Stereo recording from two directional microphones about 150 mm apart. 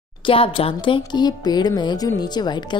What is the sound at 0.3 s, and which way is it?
Speech, 40° left (ahead or behind).